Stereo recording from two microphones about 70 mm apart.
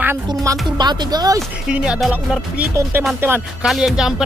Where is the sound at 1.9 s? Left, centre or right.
Centre.